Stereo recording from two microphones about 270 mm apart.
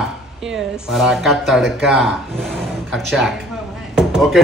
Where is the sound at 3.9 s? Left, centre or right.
Centre.